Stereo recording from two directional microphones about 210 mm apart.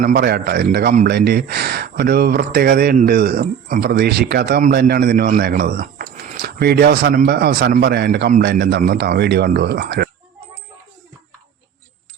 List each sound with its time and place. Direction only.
0.0 s speech: 50° right (ahead or behind)